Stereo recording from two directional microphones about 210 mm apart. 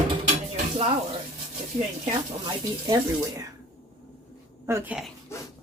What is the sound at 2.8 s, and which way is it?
Speech, 15° right (ahead or behind).